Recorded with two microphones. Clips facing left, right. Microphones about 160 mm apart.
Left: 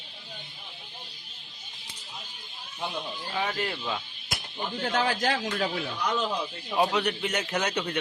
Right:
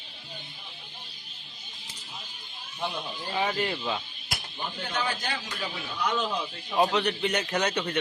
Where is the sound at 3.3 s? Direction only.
5° right (ahead or behind).